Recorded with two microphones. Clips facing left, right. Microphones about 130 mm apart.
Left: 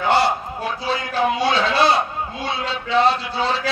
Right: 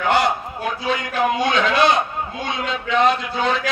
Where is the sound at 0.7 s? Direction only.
30° left (ahead or behind).